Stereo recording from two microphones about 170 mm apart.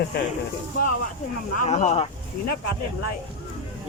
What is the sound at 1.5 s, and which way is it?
Speech, 45° left (ahead or behind).